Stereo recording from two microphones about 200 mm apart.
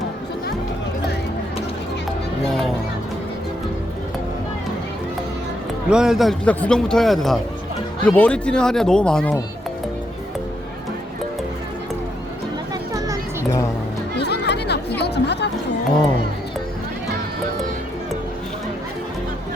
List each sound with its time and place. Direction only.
2.5 s a man's voice: centre (ahead or behind)
5.9 s a man's voice: 5° right (ahead or behind)
14.2 s chatter: 55° left (ahead or behind)